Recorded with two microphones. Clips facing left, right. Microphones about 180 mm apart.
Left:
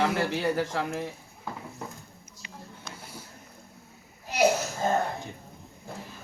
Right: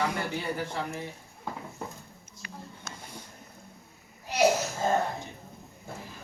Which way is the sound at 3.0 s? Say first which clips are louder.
Even; 5° left (ahead or behind).